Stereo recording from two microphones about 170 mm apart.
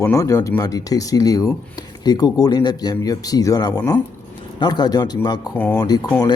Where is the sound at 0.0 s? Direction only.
20° left (ahead or behind).